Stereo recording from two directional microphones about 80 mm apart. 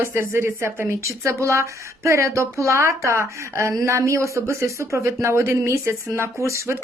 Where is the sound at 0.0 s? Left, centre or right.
Right.